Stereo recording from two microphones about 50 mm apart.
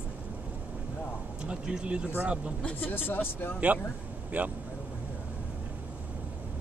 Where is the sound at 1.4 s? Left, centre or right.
Centre.